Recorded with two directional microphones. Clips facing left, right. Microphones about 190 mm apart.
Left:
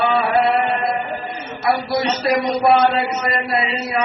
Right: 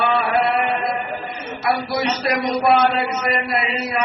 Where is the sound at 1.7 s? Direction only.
30° left (ahead or behind).